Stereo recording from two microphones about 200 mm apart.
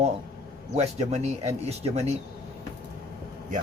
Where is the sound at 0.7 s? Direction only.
35° right (ahead or behind).